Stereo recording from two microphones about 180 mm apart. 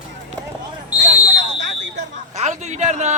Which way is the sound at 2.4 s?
40° right (ahead or behind).